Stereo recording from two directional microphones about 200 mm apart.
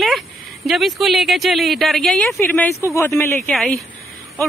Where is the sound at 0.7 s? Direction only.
Centre (ahead or behind).